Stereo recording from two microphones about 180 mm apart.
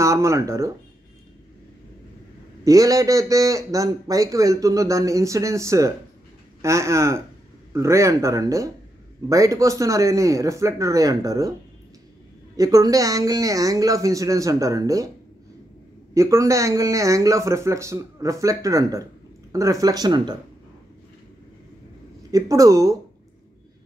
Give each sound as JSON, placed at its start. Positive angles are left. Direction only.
{"t": 0.0, "sound": "speech", "side_deg": -15}
{"t": 2.6, "sound": "a man's voice", "side_deg": -20}
{"t": 12.5, "sound": "a man's voice", "side_deg": -20}
{"t": 16.2, "sound": "a man's voice", "side_deg": -15}
{"t": 22.3, "sound": "a man's voice", "side_deg": -20}